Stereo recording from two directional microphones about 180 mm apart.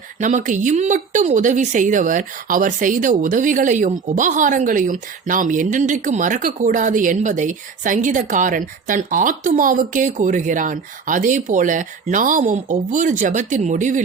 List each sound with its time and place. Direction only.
0.2 s speech: 45° right (ahead or behind)